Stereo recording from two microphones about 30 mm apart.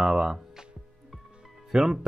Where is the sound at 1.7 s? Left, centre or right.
Right.